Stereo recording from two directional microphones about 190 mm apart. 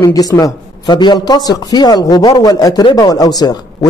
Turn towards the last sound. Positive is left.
turn(degrees=20)  # may be behind; listen again after turning